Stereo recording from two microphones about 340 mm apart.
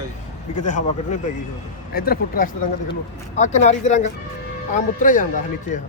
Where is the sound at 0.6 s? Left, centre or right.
Left.